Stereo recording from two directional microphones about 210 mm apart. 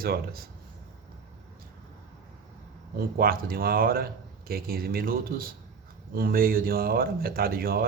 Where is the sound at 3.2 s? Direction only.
45° right (ahead or behind).